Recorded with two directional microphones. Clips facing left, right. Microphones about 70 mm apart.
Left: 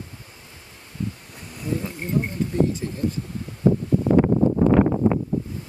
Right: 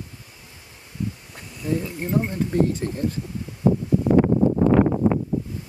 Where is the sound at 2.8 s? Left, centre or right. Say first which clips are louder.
Right 2 dB; right.